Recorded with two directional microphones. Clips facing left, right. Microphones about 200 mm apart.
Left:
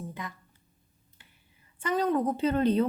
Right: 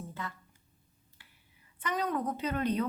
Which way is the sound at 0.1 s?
15° left (ahead or behind).